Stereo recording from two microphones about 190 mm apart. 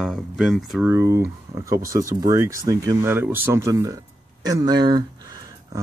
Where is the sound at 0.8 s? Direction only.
15° right (ahead or behind).